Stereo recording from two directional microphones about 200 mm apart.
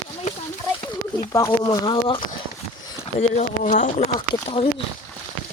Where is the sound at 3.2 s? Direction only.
40° left (ahead or behind).